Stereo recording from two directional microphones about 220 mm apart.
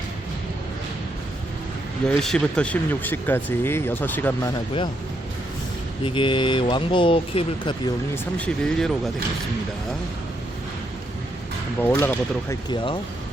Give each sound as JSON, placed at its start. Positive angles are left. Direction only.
{"t": 2.0, "sound": "speech", "side_deg": 5}
{"t": 6.0, "sound": "speech", "side_deg": 25}
{"t": 8.4, "sound": "speech", "side_deg": 5}
{"t": 11.8, "sound": "speech", "side_deg": 10}